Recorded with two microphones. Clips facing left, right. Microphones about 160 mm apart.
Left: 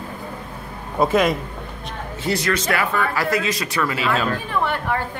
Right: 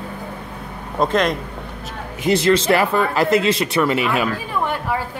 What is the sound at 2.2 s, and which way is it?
Speech, 25° right (ahead or behind).